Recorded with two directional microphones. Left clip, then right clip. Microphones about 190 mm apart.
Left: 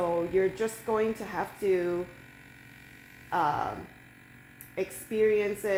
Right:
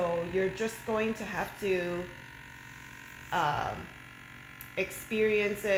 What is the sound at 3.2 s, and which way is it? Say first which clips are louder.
Speech: left 2 dB; 20° left (ahead or behind).